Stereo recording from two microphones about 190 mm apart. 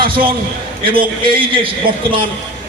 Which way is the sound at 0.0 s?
25° right (ahead or behind).